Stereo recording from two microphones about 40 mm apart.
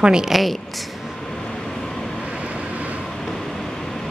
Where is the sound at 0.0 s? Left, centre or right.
Centre.